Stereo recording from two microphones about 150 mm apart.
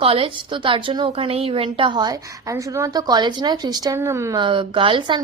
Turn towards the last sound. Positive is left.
turn(degrees=-35)  # may be behind; listen again after turning